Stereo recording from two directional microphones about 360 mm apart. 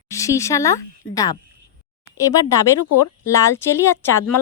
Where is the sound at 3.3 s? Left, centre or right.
Centre.